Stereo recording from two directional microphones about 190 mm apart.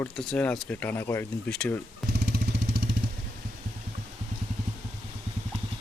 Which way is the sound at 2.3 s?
60° right (ahead or behind).